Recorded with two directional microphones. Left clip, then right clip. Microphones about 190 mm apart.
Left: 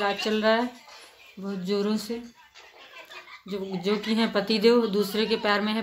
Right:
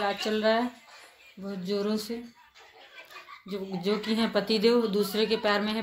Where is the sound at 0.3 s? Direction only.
5° right (ahead or behind).